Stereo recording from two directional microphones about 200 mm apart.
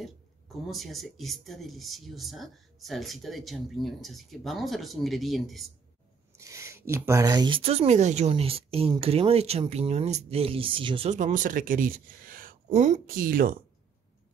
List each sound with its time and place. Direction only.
0.7 s speech: centre (ahead or behind)
6.3 s speech: 15° right (ahead or behind)
11.1 s speech: 40° right (ahead or behind)